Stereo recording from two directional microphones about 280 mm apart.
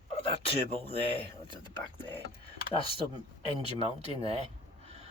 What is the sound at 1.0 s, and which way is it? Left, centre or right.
Speech, left.